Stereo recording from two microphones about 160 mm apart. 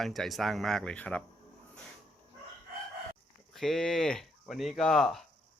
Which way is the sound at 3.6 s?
5° left (ahead or behind).